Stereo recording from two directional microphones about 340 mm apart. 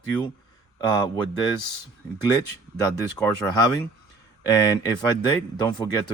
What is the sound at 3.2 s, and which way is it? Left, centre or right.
Speech, centre.